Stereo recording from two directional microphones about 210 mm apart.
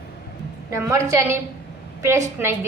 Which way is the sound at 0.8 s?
15° right (ahead or behind).